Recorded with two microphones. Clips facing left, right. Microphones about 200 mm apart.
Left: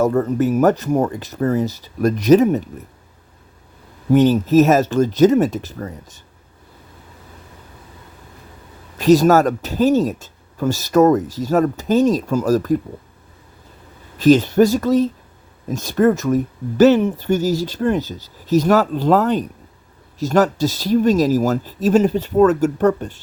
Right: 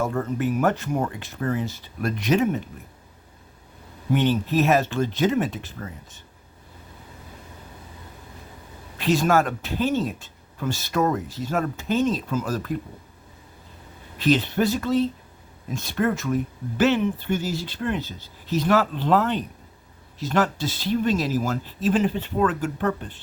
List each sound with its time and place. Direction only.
0.0 s speech: 40° left (ahead or behind)
4.1 s speech: 40° left (ahead or behind)
9.0 s speech: 40° left (ahead or behind)
14.2 s speech: 40° left (ahead or behind)